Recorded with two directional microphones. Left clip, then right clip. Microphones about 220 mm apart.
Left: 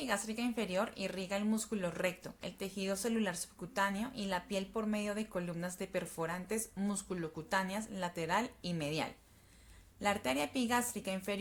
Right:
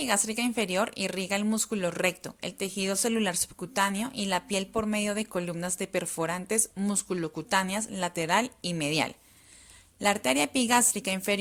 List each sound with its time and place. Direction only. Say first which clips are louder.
0.0 s speech: right 9 dB; 35° right (ahead or behind)